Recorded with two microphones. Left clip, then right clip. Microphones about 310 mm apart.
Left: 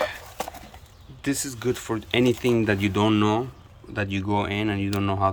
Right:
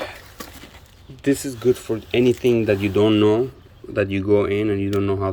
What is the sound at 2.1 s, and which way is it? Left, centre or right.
Speech, left.